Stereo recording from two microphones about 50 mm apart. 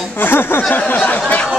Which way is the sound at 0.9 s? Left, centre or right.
Left.